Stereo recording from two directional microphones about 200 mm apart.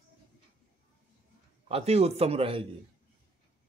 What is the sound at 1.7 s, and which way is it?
Speech, 30° right (ahead or behind).